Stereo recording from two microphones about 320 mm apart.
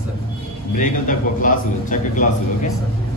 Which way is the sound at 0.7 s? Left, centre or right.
Left.